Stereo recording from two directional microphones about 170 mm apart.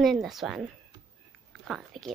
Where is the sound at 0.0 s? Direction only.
Centre (ahead or behind).